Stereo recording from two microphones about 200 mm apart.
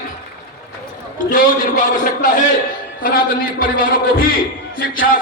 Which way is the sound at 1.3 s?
40° left (ahead or behind).